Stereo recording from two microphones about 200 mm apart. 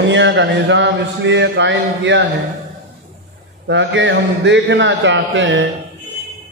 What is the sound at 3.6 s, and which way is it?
A man's voice, 65° right (ahead or behind).